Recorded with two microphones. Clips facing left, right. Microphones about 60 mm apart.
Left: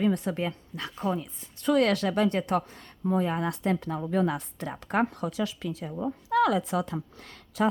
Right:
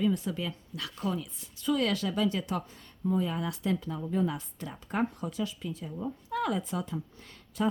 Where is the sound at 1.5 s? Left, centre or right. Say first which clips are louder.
Left 5 dB; left.